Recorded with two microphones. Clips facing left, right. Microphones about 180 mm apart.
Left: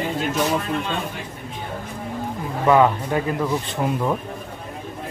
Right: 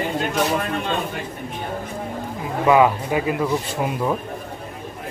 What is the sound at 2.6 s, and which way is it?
A man's voice, 10° right (ahead or behind).